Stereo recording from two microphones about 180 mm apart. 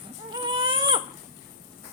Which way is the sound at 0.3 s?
25° right (ahead or behind).